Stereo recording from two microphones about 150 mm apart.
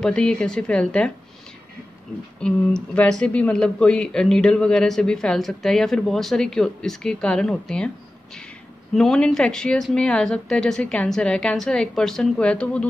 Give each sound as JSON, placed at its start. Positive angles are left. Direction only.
{"t": 0.0, "sound": "speech", "side_deg": 5}
{"t": 2.4, "sound": "speech", "side_deg": 5}
{"t": 8.9, "sound": "speech", "side_deg": 5}